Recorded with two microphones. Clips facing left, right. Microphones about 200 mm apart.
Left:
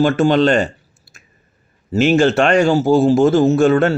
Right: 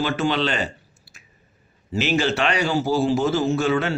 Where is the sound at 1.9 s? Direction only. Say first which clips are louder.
Left 8 dB; 45° left (ahead or behind).